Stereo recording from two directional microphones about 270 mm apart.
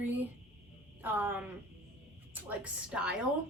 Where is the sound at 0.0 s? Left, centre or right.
Centre.